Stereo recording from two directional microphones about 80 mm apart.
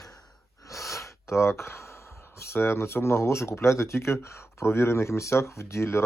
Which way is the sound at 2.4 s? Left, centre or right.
Left.